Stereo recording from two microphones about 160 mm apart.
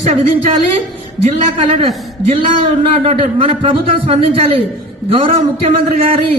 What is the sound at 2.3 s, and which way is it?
A man's voice, 35° right (ahead or behind).